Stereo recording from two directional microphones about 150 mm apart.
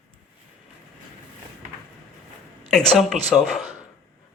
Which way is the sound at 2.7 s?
5° left (ahead or behind).